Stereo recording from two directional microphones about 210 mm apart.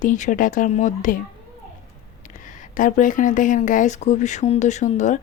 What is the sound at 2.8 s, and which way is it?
Speech, 40° left (ahead or behind).